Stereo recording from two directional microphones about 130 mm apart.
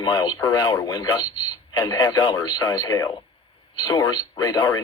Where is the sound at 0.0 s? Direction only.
35° left (ahead or behind).